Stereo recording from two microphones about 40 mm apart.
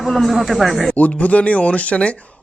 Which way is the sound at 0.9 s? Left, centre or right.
Left.